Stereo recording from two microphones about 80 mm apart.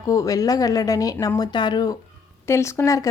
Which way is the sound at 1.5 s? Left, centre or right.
Left.